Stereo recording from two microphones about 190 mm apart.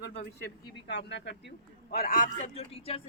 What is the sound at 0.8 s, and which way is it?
A man's voice, 65° left (ahead or behind).